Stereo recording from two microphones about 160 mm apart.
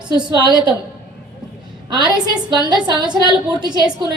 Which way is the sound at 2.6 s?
30° right (ahead or behind).